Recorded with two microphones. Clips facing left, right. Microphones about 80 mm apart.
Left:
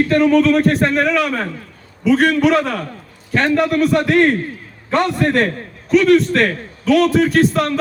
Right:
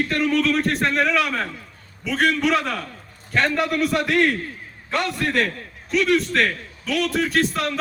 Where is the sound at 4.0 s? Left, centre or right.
Left.